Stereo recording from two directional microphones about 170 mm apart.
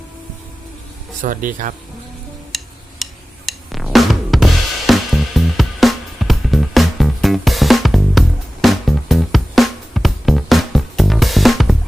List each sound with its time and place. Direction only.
1.2 s speech: 50° right (ahead or behind)
2.5 s a sound: centre (ahead or behind)
3.0 s music: centre (ahead or behind)